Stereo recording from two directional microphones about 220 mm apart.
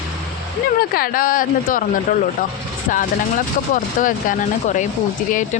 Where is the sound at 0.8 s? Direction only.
40° left (ahead or behind).